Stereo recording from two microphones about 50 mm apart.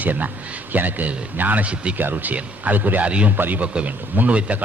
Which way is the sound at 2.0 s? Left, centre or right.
Right.